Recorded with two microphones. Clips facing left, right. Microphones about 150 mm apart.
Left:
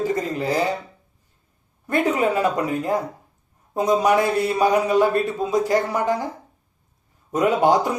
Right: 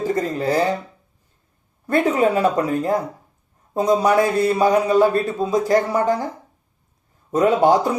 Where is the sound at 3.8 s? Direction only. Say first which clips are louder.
Right 2 dB; 40° right (ahead or behind).